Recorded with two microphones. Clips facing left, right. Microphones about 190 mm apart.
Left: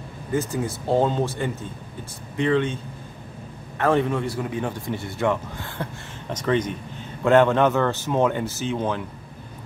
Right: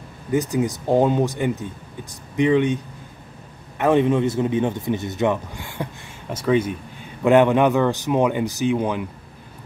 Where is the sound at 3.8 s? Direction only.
20° right (ahead or behind).